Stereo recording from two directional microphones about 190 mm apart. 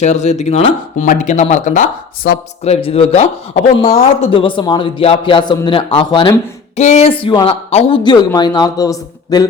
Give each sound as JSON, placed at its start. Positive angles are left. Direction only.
{"t": 0.0, "sound": "speech", "side_deg": 35}